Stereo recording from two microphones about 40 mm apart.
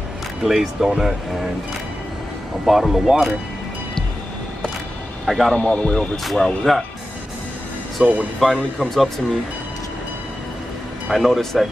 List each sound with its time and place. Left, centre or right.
0.4 s speech: centre
2.6 s speech: centre
5.2 s speech: centre
5.6 s speech: left
6.3 s speech: centre
8.0 s speech: right
8.4 s speech: centre
11.1 s speech: centre